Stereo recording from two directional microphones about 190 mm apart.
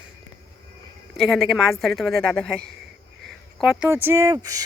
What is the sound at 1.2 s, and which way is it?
Speech, centre (ahead or behind).